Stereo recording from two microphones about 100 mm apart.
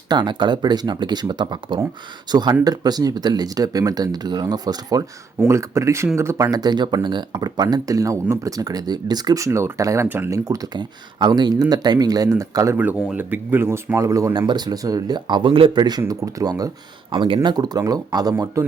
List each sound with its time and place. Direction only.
0.1 s speech: 50° right (ahead or behind)
5.5 s speech: 30° right (ahead or behind)
12.7 s speech: 15° right (ahead or behind); by 14.3 s 35° right (ahead or behind)
14.3 s speech: 45° right (ahead or behind)
15.8 s speech: 40° right (ahead or behind)
17.1 s speech: 60° right (ahead or behind); by 18.6 s 40° right (ahead or behind)